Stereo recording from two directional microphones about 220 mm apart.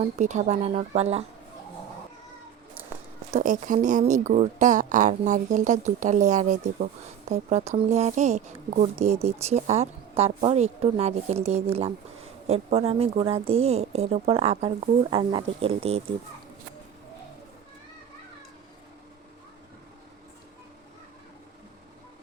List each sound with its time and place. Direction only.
0.2 s speech: 30° right (ahead or behind)
3.3 s speech: 35° right (ahead or behind)